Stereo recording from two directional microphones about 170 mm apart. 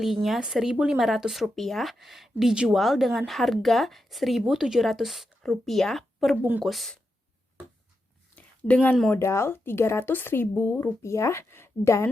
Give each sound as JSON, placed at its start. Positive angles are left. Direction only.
{"t": 0.0, "sound": "speech", "side_deg": 0}
{"t": 6.3, "sound": "speech", "side_deg": -10}
{"t": 8.4, "sound": "speech", "side_deg": 10}